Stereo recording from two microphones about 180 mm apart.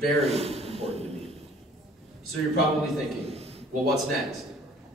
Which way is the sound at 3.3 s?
35° right (ahead or behind).